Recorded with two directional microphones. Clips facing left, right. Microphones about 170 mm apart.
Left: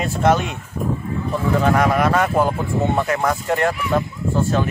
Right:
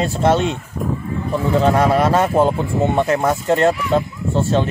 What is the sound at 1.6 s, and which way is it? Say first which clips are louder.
Speech: right 3 dB; 30° right (ahead or behind).